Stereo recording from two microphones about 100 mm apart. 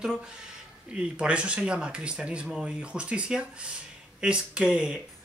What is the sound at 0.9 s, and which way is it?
Speech, 10° right (ahead or behind).